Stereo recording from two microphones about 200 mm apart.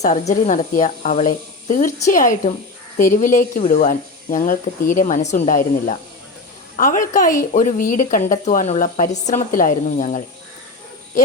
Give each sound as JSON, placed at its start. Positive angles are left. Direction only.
{"t": 0.0, "sound": "a woman's voice", "side_deg": 35}